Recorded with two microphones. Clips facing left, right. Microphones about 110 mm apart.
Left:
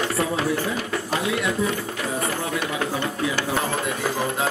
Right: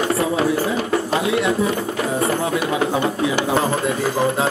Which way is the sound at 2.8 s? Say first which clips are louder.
Right 6 dB; 20° right (ahead or behind).